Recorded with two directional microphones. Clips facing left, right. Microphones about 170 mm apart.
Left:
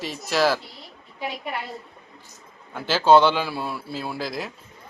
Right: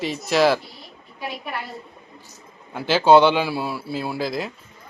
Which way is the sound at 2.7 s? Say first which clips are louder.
Right 2 dB; 10° right (ahead or behind).